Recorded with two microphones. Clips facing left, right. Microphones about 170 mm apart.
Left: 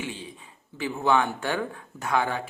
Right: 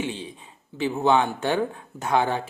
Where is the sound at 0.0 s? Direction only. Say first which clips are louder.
Right 5 dB; 25° right (ahead or behind).